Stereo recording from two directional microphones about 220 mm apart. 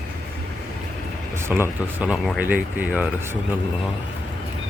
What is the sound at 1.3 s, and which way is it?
Speech, 10° right (ahead or behind).